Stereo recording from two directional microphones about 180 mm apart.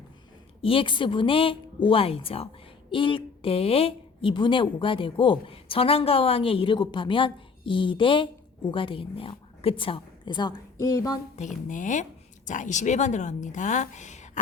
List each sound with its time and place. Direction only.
0.6 s speech: 30° left (ahead or behind)
11.3 s a woman's voice: 45° left (ahead or behind)